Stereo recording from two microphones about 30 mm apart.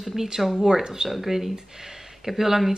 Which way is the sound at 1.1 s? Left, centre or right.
Centre.